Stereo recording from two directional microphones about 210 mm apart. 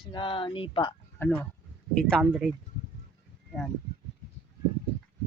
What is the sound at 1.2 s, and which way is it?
Speech, 10° left (ahead or behind).